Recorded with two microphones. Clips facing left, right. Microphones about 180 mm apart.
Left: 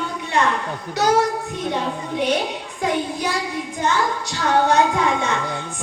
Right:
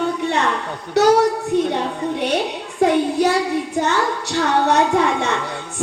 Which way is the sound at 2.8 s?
65° right (ahead or behind).